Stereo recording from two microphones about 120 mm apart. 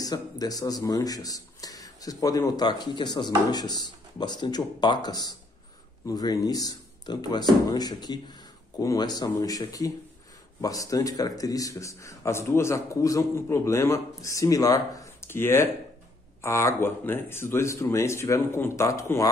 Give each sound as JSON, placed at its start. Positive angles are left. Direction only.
{"t": 0.0, "sound": "a man's voice", "side_deg": 30}